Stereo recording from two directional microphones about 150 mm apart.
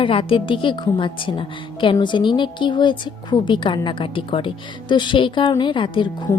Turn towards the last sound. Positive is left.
turn(degrees=35)  # may be behind; listen again after turning